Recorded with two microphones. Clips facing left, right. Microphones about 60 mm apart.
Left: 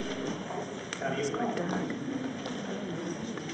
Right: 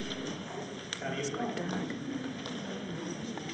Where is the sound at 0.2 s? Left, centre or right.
Centre.